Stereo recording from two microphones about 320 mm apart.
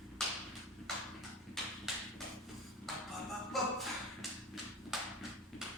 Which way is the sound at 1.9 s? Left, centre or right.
Centre.